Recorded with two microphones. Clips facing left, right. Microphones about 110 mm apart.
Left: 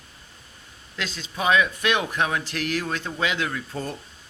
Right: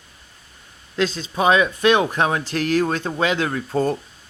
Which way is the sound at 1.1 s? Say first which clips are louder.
Right 3 dB; 35° right (ahead or behind).